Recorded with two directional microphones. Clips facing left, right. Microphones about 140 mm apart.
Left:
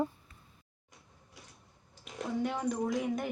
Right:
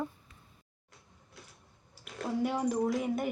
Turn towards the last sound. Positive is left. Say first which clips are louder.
# right 2 dB
turn(degrees=0)  # may be behind; listen again after turning